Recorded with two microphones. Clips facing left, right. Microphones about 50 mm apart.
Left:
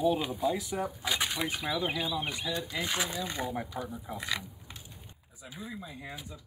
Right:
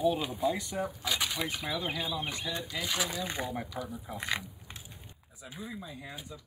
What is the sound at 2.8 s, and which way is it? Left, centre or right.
Speech, left.